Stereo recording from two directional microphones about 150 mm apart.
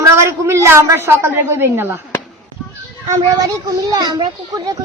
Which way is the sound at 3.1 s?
25° right (ahead or behind).